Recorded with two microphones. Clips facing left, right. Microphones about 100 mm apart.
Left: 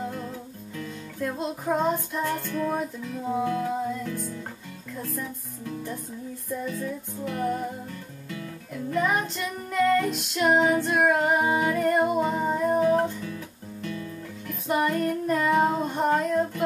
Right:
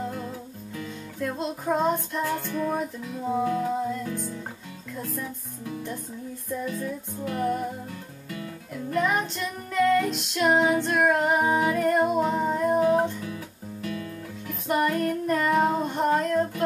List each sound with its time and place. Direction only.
0.0 s music: 5° right (ahead or behind)
5.0 s speech: 5° right (ahead or behind)
6.6 s music: centre (ahead or behind)
14.5 s music: centre (ahead or behind)